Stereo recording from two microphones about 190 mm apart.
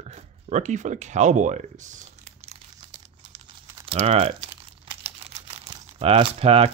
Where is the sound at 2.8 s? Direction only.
25° right (ahead or behind).